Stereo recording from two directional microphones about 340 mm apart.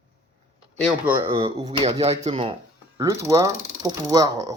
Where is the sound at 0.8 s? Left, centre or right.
Centre.